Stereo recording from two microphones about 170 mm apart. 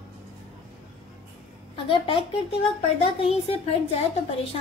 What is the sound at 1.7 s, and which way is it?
Speech, 30° left (ahead or behind).